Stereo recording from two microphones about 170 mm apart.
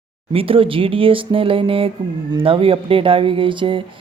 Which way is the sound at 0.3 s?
30° right (ahead or behind).